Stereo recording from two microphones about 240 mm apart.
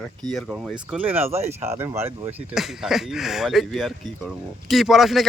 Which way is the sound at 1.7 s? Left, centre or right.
Centre.